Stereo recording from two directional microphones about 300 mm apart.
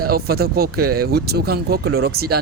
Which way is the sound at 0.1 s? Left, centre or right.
Right.